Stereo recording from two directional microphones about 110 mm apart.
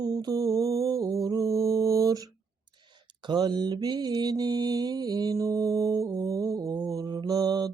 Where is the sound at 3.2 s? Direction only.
45° right (ahead or behind).